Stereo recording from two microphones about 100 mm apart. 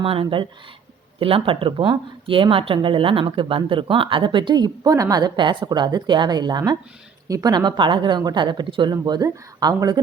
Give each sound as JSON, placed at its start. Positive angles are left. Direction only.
{"t": 0.0, "sound": "speech", "side_deg": -65}